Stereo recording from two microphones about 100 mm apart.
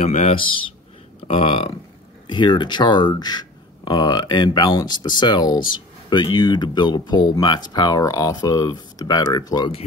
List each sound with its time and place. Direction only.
0.3 s a man's voice: 60° left (ahead or behind)
1.2 s speech: 75° left (ahead or behind)
2.2 s speech: 50° left (ahead or behind)